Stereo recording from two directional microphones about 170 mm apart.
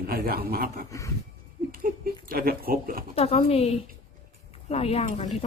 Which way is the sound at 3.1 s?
35° left (ahead or behind).